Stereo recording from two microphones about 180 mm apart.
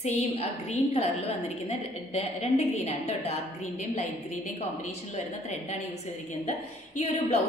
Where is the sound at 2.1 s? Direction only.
35° left (ahead or behind).